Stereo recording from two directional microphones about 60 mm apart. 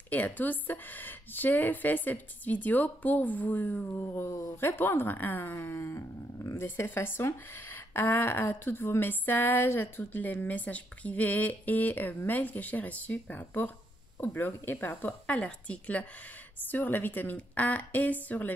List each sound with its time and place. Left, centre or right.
0.1 s a woman's voice: left
4.0 s a woman's voice: left
15.2 s a woman's voice: left
16.6 s a woman's voice: left